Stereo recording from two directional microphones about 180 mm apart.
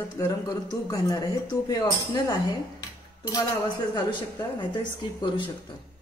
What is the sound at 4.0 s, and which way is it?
Speech, 25° left (ahead or behind).